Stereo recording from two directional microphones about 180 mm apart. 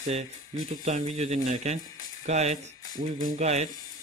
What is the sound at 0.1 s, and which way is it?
Speech, 40° right (ahead or behind).